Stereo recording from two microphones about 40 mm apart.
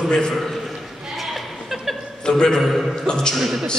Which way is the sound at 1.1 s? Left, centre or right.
Centre.